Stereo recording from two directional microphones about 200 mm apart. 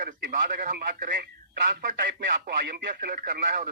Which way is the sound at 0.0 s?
45° right (ahead or behind).